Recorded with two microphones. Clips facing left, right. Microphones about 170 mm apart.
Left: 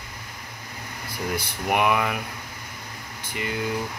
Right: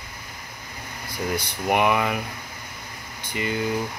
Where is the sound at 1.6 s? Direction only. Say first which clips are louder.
Right 1 dB; centre (ahead or behind).